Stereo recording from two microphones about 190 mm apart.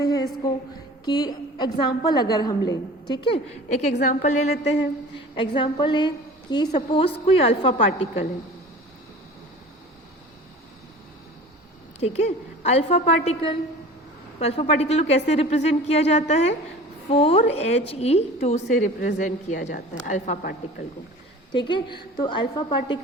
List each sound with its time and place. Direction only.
0.0 s a sound: 20° left (ahead or behind)
1.0 s a woman's voice: 20° left (ahead or behind)
3.9 s a woman's voice: 40° left (ahead or behind)
5.4 s a woman's voice: 25° left (ahead or behind)
6.7 s a woman's voice: 35° left (ahead or behind)
11.9 s a woman's voice: 35° left (ahead or behind); by 20.8 s 50° left (ahead or behind)
21.5 s a woman's voice: 25° left (ahead or behind)